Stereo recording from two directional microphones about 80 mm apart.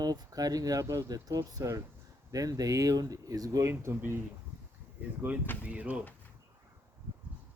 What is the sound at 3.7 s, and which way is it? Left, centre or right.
Speech, right.